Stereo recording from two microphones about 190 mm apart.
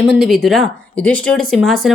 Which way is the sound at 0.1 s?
Centre (ahead or behind).